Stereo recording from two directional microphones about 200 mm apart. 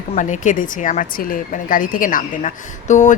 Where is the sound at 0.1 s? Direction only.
40° left (ahead or behind).